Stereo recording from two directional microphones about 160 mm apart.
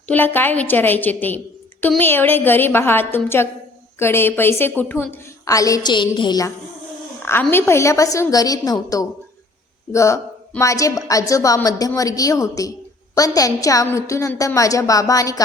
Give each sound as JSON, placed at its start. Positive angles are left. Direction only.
{"t": 0.1, "sound": "a woman's voice", "side_deg": 10}
{"t": 7.2, "sound": "a woman's voice", "side_deg": 15}